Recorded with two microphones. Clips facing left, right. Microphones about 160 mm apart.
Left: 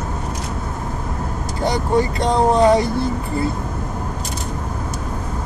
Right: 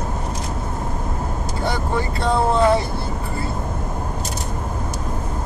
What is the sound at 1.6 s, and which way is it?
Speech, 15° left (ahead or behind).